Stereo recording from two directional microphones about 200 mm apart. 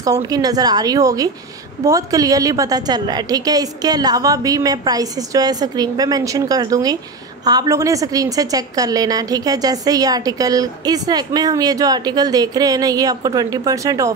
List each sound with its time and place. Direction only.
0.0 s a woman's voice: 20° right (ahead or behind)